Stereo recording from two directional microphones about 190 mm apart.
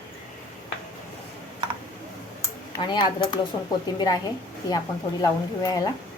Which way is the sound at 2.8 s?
25° left (ahead or behind).